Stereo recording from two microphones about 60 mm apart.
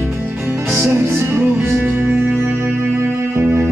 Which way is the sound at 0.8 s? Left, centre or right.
Right.